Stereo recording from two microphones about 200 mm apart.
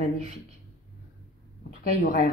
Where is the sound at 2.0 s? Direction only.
40° left (ahead or behind).